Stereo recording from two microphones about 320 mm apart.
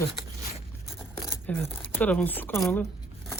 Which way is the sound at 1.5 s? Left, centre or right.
Centre.